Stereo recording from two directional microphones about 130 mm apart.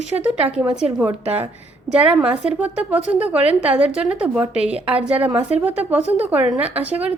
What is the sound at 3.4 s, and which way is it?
Speech, 50° right (ahead or behind).